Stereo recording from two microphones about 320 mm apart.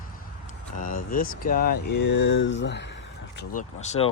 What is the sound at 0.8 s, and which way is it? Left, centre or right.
Speech, left.